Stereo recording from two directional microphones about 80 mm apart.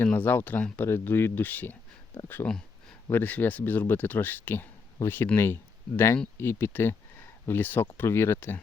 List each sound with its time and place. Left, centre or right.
0.0 s speech: left